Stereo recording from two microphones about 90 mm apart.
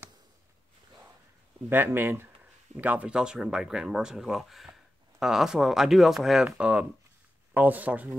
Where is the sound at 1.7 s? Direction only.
25° right (ahead or behind).